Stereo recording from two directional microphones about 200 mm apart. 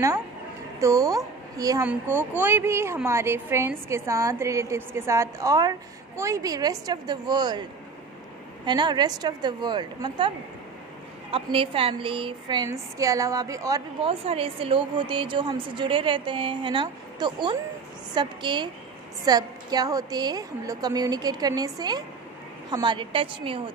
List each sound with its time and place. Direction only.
0.7 s a woman's voice: 15° right (ahead or behind)
8.6 s a woman's voice: 20° right (ahead or behind)
11.3 s a woman's voice: 25° right (ahead or behind)
14.0 s a woman's voice: 30° right (ahead or behind)